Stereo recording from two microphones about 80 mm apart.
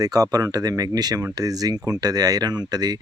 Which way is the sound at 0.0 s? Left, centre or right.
Right.